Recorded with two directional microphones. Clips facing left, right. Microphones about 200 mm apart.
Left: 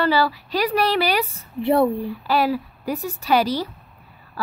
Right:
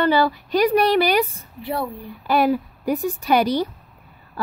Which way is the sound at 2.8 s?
55° right (ahead or behind).